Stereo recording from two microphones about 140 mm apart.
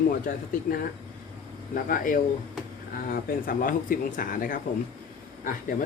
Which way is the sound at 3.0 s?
90° left.